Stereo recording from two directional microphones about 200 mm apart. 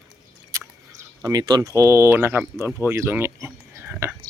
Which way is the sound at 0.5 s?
15° right (ahead or behind).